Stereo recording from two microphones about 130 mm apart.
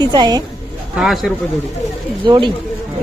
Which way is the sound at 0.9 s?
Centre (ahead or behind).